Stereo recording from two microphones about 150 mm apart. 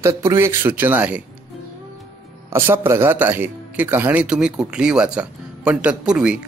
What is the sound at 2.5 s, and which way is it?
A man's voice, 15° right (ahead or behind).